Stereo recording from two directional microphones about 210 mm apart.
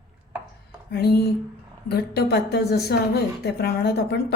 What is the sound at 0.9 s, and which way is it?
Speech, 50° left (ahead or behind).